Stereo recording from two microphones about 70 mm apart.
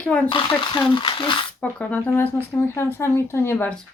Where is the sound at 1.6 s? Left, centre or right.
Left.